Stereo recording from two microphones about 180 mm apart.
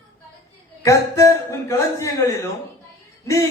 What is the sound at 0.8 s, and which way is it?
A man's voice, 15° left (ahead or behind).